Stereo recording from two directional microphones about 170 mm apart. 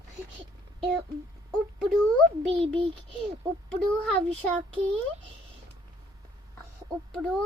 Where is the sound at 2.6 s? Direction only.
35° right (ahead or behind).